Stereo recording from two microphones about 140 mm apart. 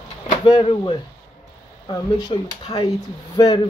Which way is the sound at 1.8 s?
30° left (ahead or behind).